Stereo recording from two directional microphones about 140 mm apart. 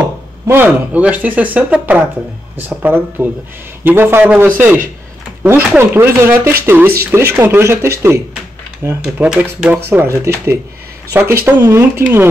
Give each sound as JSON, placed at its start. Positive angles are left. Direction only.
{"t": 0.5, "sound": "speech", "side_deg": -15}
{"t": 9.0, "sound": "speech", "side_deg": -10}